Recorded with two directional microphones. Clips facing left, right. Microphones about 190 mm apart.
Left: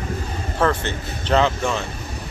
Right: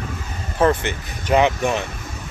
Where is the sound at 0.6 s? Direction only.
15° right (ahead or behind).